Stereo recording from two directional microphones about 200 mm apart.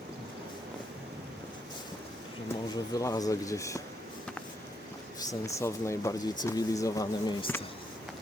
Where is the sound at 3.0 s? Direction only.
15° left (ahead or behind).